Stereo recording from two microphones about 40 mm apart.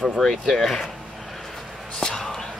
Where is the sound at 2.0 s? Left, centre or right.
Centre.